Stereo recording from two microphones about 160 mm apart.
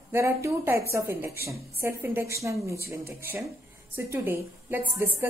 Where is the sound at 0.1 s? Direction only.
15° right (ahead or behind).